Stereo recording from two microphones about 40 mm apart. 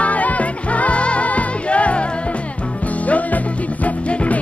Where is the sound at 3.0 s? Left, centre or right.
Left.